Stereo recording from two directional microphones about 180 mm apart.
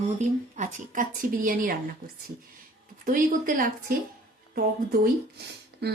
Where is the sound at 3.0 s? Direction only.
50° right (ahead or behind).